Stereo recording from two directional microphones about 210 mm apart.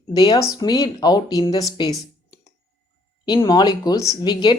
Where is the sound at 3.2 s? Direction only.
20° left (ahead or behind).